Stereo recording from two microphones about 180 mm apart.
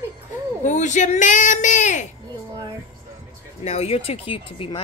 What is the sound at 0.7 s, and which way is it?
A woman's voice, 45° left (ahead or behind).